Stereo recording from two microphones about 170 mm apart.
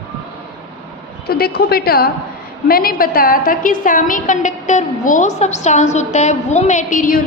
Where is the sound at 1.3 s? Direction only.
65° left (ahead or behind).